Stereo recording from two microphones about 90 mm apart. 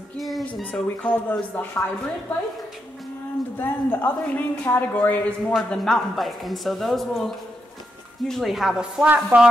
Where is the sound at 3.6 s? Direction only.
20° left (ahead or behind).